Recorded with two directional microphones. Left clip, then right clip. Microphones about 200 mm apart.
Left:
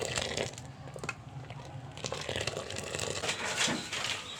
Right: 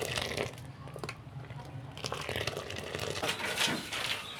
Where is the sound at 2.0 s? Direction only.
Centre (ahead or behind).